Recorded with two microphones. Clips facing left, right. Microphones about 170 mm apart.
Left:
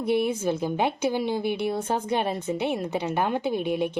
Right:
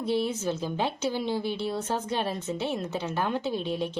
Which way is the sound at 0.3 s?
15° left (ahead or behind).